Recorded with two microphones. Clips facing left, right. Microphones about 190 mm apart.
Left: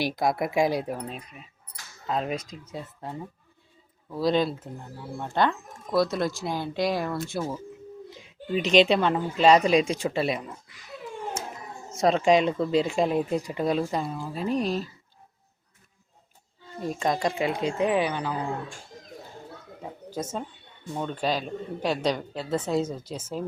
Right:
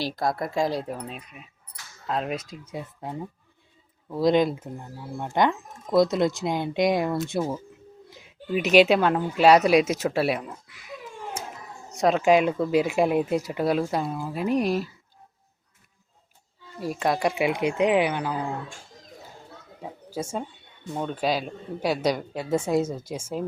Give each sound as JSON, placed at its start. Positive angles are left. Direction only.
{"t": 0.0, "sound": "speech", "side_deg": 15}
{"t": 1.0, "sound": "speech", "side_deg": -5}
{"t": 11.9, "sound": "speech", "side_deg": 0}
{"t": 16.8, "sound": "speech", "side_deg": -5}
{"t": 19.8, "sound": "a sound", "side_deg": -10}
{"t": 20.9, "sound": "speech", "side_deg": -10}